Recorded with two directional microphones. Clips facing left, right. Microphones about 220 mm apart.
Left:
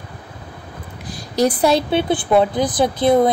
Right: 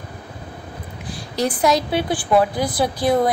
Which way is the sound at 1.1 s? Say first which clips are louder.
Left 5 dB; 40° left (ahead or behind).